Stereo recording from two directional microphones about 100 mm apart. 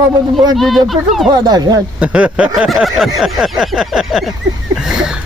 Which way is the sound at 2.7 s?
Centre (ahead or behind).